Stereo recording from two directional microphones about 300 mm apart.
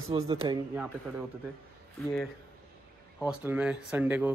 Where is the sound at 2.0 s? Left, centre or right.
Centre.